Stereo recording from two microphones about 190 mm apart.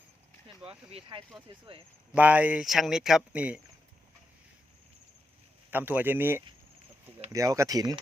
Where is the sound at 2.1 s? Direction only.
10° right (ahead or behind).